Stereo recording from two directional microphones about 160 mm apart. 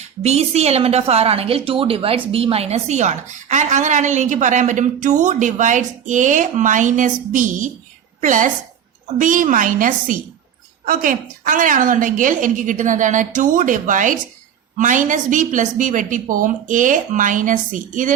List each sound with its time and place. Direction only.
0.2 s a woman's voice: 40° right (ahead or behind)